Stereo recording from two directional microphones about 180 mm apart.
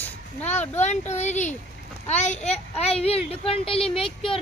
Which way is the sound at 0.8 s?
40° left (ahead or behind).